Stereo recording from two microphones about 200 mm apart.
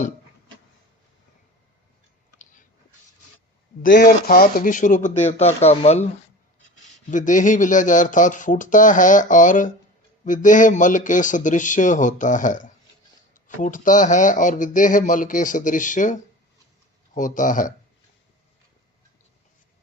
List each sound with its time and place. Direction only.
2.4 s a sound: 40° left (ahead or behind)
3.8 s speech: 45° left (ahead or behind)
7.1 s speech: 40° left (ahead or behind)